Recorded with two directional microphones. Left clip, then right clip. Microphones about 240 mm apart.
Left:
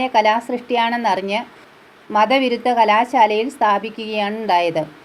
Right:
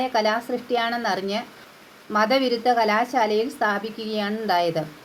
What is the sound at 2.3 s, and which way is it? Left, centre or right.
Speech, left.